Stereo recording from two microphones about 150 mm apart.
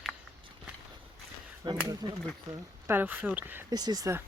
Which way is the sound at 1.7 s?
25° right (ahead or behind).